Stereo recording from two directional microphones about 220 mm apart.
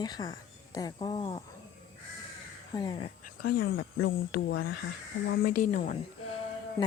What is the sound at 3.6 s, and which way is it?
Speech, 60° left (ahead or behind).